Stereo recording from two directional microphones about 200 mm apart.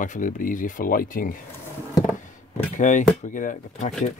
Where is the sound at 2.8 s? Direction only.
40° left (ahead or behind).